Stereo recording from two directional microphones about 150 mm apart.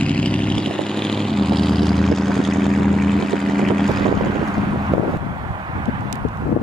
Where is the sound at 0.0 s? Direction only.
10° left (ahead or behind).